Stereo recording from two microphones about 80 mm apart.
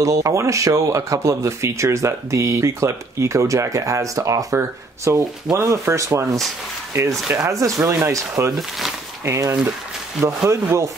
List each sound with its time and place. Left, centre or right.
0.0 s speech: right
8.5 s speech: centre
9.2 s speech: right